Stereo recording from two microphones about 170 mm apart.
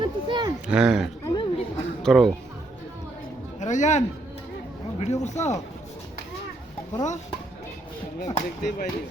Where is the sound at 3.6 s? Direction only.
45° left (ahead or behind).